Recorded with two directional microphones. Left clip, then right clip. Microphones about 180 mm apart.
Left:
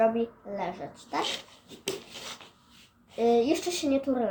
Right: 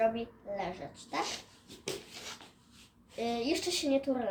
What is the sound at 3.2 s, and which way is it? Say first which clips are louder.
Speech: left 9 dB; centre (ahead or behind).